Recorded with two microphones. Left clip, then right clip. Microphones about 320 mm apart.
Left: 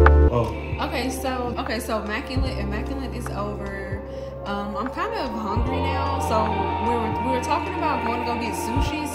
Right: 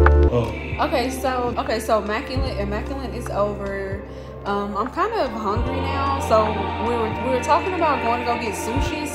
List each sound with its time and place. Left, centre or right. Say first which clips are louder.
0.0 s music: even; centre
0.7 s speech: right 6 dB; centre
4.5 s speech: right 5 dB; centre